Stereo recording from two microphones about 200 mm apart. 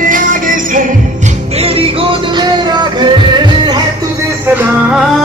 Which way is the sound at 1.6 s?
30° right (ahead or behind).